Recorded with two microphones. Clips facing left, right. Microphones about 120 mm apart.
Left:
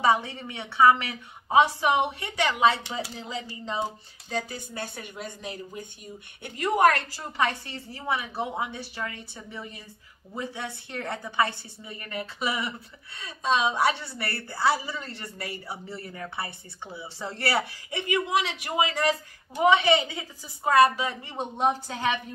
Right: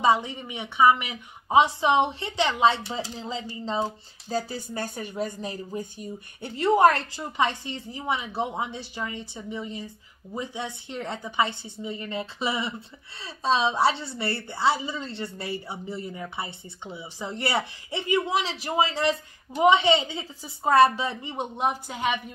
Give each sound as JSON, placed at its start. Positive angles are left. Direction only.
{"t": 0.0, "sound": "a woman's voice", "side_deg": -15}